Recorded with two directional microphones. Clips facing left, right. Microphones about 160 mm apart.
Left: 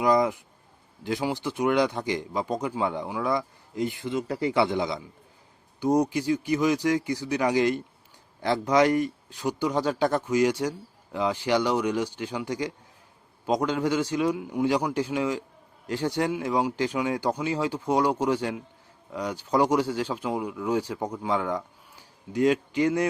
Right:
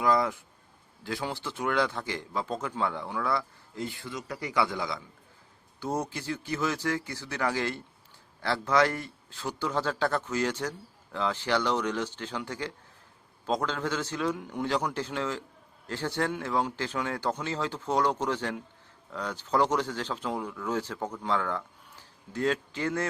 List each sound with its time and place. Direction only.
0.0 s a man's voice: 20° left (ahead or behind)